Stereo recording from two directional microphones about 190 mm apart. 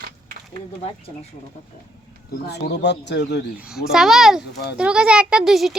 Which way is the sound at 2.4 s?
60° left (ahead or behind).